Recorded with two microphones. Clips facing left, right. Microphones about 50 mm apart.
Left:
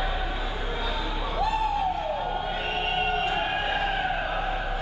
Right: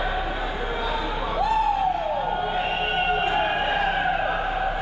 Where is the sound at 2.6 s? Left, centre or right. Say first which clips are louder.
Right 3 dB; centre.